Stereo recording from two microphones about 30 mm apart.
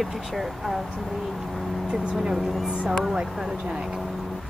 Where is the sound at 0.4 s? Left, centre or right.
Centre.